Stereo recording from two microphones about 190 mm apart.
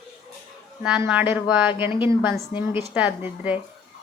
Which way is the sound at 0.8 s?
5° right (ahead or behind).